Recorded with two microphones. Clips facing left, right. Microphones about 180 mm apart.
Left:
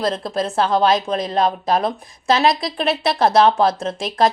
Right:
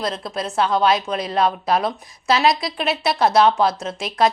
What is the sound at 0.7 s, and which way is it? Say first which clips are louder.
Speech: left 1 dB; 45° left (ahead or behind).